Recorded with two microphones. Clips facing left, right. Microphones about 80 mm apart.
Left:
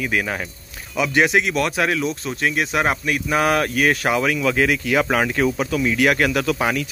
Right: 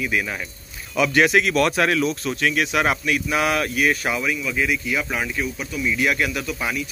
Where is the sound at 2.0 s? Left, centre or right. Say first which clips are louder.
Even; left.